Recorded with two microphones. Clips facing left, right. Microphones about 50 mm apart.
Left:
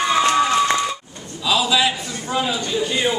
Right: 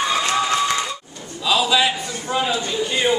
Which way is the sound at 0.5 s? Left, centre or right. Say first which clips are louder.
Left 3 dB; left.